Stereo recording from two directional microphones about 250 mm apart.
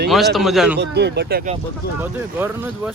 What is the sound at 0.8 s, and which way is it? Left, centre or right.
Speech, right.